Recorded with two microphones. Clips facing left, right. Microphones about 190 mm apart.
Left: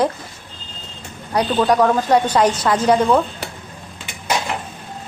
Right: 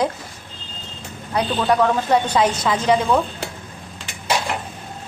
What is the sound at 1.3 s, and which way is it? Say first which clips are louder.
A woman's voice: left 3 dB; 5° right (ahead or behind).